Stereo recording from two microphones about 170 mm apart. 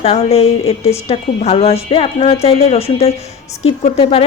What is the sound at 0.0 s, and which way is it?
A woman's voice, 35° left (ahead or behind).